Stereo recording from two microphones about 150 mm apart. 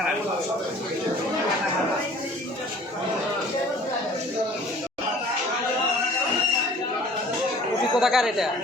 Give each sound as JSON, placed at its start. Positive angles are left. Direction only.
{"t": 7.9, "sound": "speech", "side_deg": 0}